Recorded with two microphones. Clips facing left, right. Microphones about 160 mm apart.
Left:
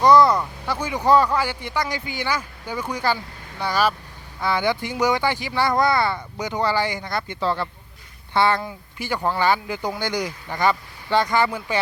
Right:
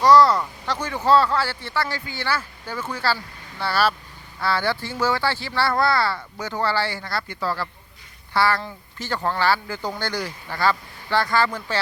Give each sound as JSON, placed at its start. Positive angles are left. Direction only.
{"t": 0.0, "sound": "speech", "side_deg": 15}